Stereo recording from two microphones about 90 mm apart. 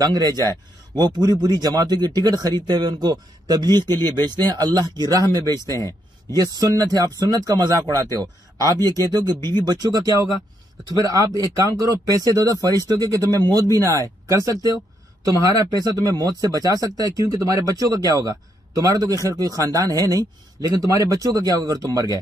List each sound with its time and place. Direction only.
0.0 s speech: 45° right (ahead or behind)